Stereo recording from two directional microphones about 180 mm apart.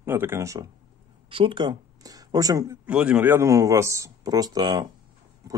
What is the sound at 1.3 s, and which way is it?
Speech, 30° right (ahead or behind).